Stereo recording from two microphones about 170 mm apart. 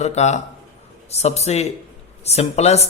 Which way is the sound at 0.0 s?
40° left (ahead or behind).